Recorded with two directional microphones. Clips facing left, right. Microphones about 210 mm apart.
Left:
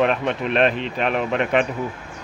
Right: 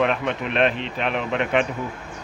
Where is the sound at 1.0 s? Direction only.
45° left (ahead or behind).